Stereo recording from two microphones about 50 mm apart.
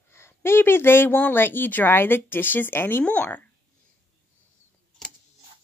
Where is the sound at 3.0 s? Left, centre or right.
Left.